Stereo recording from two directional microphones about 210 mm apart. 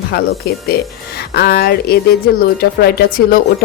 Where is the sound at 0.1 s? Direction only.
50° left (ahead or behind).